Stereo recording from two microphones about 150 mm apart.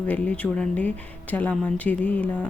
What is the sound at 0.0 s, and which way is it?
Speech, 10° left (ahead or behind).